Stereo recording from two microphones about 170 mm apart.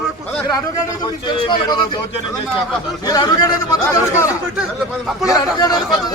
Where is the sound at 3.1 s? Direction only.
25° left (ahead or behind).